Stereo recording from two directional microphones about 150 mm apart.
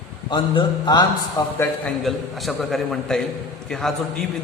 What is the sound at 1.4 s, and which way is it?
Speech, 15° left (ahead or behind).